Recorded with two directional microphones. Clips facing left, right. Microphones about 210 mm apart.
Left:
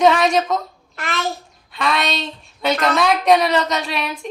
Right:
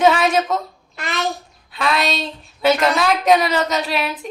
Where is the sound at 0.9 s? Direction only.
15° right (ahead or behind).